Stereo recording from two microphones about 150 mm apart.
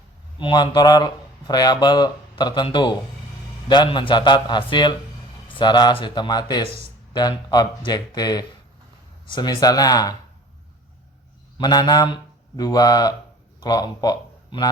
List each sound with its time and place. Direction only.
0.3 s a man's voice: 30° left (ahead or behind)
11.5 s speech: 25° left (ahead or behind)